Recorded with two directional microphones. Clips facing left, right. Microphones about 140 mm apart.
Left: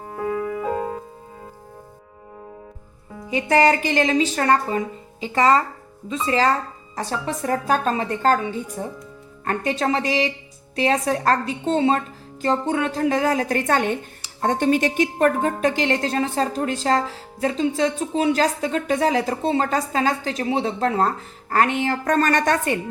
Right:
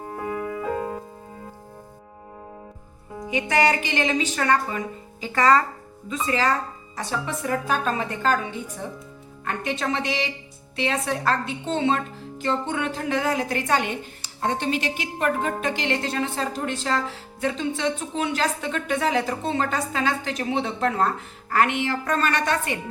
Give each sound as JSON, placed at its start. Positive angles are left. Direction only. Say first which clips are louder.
{"t": 0.6, "sound": "music", "louder": "left 2 dB", "side_deg": 25}
{"t": 3.2, "sound": "a woman's voice", "louder": "left 4 dB", "side_deg": 35}
{"t": 5.2, "sound": "a woman's voice", "louder": "left 1 dB", "side_deg": 25}
{"t": 9.4, "sound": "a woman's voice", "louder": "left 5 dB", "side_deg": 40}